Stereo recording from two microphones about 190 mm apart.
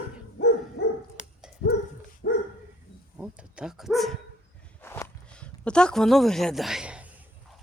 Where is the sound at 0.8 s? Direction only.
55° left (ahead or behind).